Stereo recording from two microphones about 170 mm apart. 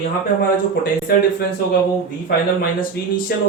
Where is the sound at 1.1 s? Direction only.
65° left (ahead or behind).